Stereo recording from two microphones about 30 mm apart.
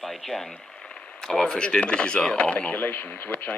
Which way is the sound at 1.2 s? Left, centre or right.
Centre.